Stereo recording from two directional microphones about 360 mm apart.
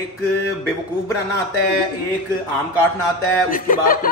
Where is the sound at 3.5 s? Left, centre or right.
Left.